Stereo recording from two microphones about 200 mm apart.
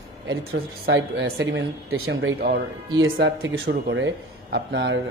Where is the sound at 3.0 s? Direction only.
65° right (ahead or behind).